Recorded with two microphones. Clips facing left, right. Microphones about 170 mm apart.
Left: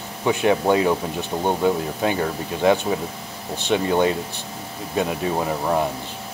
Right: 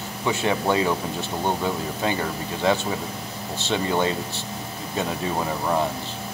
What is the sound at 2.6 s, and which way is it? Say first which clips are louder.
Speech: left 4 dB; 15° left (ahead or behind).